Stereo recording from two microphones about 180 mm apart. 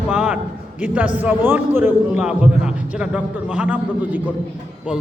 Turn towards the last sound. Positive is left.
turn(degrees=-10)  # may be behind; listen again after turning